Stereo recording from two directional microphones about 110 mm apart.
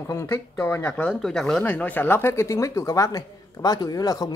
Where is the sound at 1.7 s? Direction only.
15° left (ahead or behind); by 4.3 s 35° left (ahead or behind).